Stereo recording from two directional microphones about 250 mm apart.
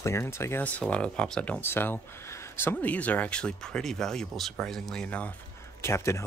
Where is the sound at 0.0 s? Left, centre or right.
Centre.